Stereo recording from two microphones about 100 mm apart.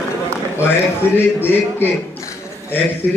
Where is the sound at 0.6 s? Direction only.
20° left (ahead or behind).